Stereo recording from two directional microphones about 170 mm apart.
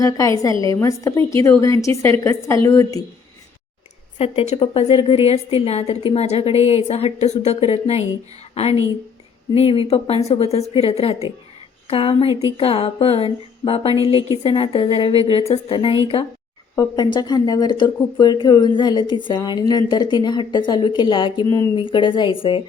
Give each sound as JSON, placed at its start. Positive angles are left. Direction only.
{"t": 0.0, "sound": "a woman's voice", "side_deg": 20}
{"t": 4.2, "sound": "a woman's voice", "side_deg": 35}